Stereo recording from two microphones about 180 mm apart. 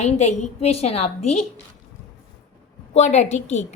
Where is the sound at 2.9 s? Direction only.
40° left (ahead or behind).